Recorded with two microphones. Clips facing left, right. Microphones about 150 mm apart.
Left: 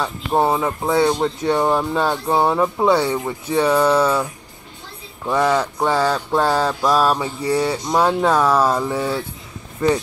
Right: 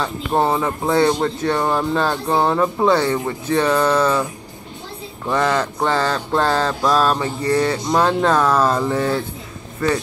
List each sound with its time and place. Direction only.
0.0 s speech: 10° left (ahead or behind)